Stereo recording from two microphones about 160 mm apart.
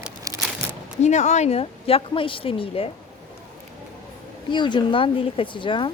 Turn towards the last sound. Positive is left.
turn(degrees=30)  # may be behind; listen again after turning